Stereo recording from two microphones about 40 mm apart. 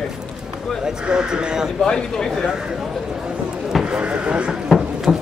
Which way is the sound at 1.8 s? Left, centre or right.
Centre.